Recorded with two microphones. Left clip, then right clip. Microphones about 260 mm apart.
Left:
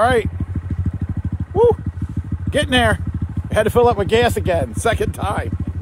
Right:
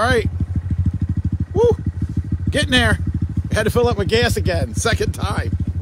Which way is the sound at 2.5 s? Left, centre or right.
Centre.